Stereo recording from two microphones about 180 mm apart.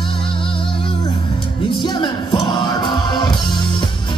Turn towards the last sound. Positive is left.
turn(degrees=25)  # may be behind; listen again after turning